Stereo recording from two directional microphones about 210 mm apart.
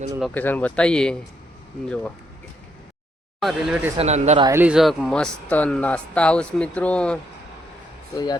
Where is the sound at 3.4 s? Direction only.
Centre (ahead or behind).